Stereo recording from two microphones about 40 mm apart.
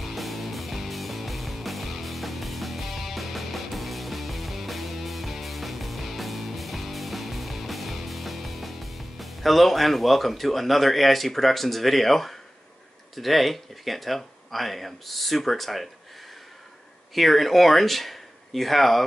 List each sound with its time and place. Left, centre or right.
0.0 s music: centre
13.1 s speech: centre
17.1 s speech: centre